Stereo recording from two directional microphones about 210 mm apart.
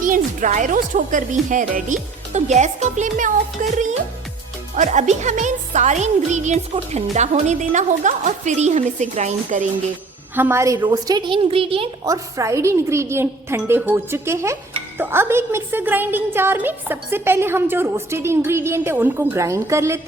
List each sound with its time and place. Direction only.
0.0 s speech: 40° right (ahead or behind)
10.3 s a woman's voice: 10° right (ahead or behind)